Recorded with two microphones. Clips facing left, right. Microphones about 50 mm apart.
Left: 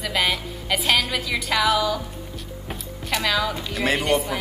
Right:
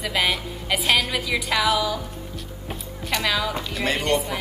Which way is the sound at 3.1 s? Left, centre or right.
Centre.